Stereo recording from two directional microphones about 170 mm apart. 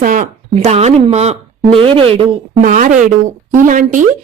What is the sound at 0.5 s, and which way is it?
Speech, 40° right (ahead or behind).